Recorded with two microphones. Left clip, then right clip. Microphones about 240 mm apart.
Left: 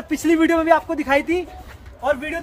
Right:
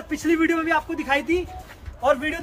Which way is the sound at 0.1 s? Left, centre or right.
Left.